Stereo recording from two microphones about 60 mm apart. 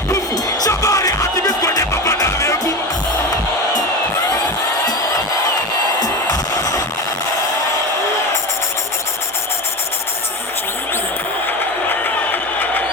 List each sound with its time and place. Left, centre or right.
0.7 s music: left
1.8 s music: left
6.0 s music: left
11.9 s a sound: left